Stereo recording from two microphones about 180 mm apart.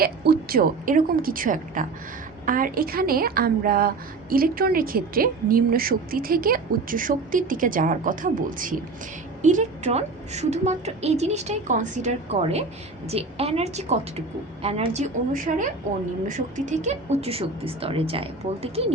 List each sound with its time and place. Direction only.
0.0 s a woman's voice: 55° right (ahead or behind); by 15.0 s 35° right (ahead or behind)
15.3 s a woman's voice: 45° right (ahead or behind)